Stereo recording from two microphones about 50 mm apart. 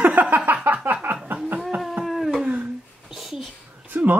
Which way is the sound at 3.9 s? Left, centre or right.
Right.